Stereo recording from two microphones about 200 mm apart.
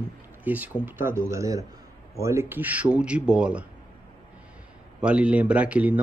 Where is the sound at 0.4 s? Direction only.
10° right (ahead or behind).